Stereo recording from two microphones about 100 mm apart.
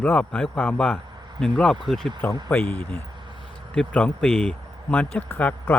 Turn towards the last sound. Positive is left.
turn(degrees=20)  # may be behind; listen again after turning